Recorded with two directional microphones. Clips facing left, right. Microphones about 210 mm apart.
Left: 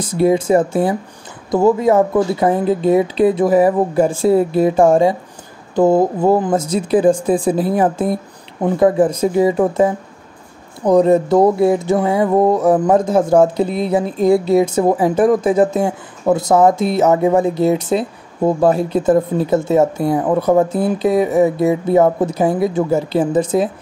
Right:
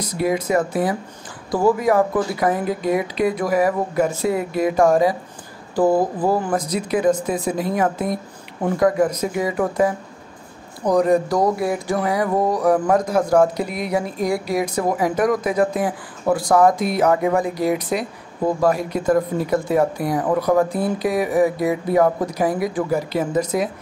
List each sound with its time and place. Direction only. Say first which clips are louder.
0.0 s speech: left 7 dB; 30° left (ahead or behind)